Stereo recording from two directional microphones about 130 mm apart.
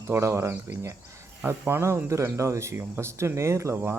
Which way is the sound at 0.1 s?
20° right (ahead or behind).